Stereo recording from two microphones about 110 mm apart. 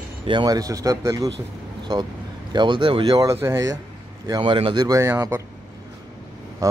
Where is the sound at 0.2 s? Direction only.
45° right (ahead or behind); by 1.3 s 30° right (ahead or behind).